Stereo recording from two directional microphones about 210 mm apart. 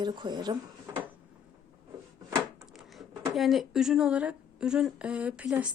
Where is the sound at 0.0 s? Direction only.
20° right (ahead or behind).